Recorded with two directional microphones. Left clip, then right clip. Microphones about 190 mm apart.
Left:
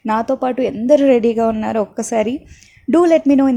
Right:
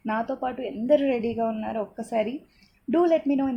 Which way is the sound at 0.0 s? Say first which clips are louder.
Left 10 dB; 30° left (ahead or behind).